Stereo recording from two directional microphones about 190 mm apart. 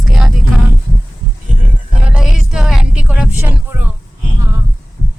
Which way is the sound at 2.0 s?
5° right (ahead or behind).